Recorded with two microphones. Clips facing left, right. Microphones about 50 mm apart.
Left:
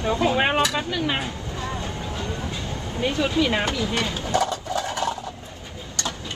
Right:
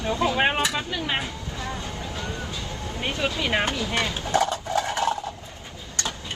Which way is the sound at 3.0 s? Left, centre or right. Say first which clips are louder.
Left 5 dB; right.